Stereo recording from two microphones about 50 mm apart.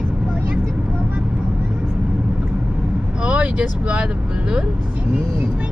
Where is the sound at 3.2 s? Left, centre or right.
Right.